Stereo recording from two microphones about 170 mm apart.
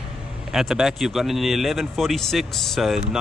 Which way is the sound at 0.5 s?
Centre (ahead or behind).